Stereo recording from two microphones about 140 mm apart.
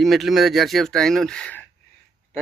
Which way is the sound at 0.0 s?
Centre (ahead or behind).